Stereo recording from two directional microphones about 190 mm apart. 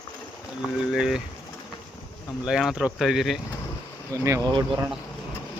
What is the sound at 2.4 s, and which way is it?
Speech, 5° right (ahead or behind).